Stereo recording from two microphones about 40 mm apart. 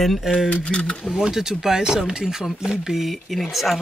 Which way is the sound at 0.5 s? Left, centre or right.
Left.